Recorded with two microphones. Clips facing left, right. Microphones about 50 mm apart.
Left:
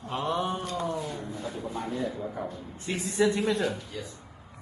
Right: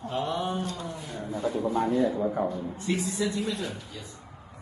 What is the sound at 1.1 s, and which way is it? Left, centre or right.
Speech, right.